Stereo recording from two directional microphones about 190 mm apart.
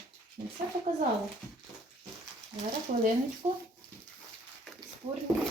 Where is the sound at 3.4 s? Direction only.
30° right (ahead or behind).